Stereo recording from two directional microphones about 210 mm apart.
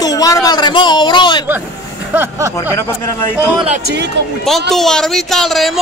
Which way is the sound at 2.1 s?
10° right (ahead or behind).